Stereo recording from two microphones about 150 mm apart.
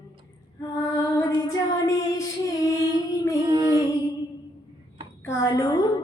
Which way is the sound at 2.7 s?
25° left (ahead or behind).